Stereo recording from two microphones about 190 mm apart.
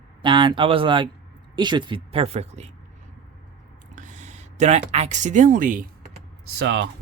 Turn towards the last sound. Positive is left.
turn(degrees=-65)  # may be behind; listen again after turning